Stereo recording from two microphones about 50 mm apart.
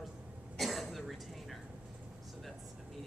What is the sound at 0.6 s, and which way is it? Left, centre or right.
Cough, centre.